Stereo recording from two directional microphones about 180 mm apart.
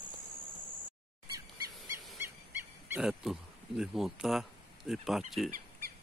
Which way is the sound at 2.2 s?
10° right (ahead or behind).